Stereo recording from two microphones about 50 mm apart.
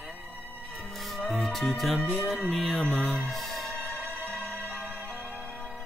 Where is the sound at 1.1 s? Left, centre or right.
Centre.